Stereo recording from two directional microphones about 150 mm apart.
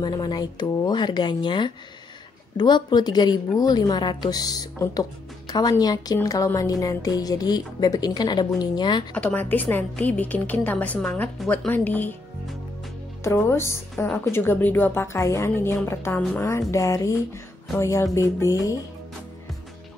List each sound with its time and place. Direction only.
0.0 s a woman's voice: 30° left (ahead or behind)
9.1 s a woman's voice: 10° left (ahead or behind)
13.2 s a woman's voice: 15° left (ahead or behind)
14.0 s a woman's voice: 5° left (ahead or behind); by 18.8 s 20° left (ahead or behind)